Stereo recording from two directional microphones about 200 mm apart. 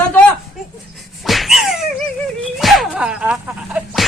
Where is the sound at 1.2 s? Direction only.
Centre (ahead or behind).